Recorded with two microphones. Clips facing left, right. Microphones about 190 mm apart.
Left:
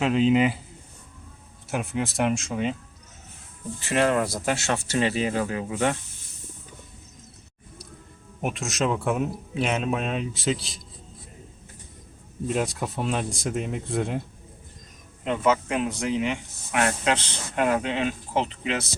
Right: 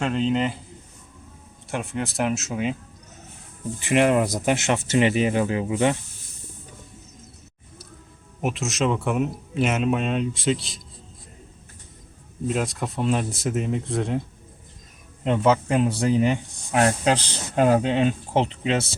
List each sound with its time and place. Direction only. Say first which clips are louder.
0.0 s speech: left 3 dB; 5° left (ahead or behind)
1.7 s speech: even; centre (ahead or behind)
3.8 s speech: right 3 dB; 15° right (ahead or behind)
8.4 s speech: right 2 dB; centre (ahead or behind)
12.5 s speech: right 1 dB; centre (ahead or behind)
15.2 s speech: right 3 dB; 30° right (ahead or behind)